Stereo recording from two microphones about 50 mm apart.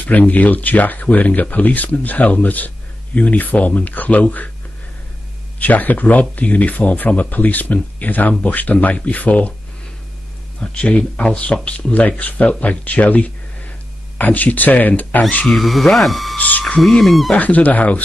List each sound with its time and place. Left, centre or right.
0.0 s speech: left
5.6 s speech: left
10.6 s speech: left
15.4 s speech: centre
16.3 s speech: left
16.8 s speech: centre
17.4 s speech: left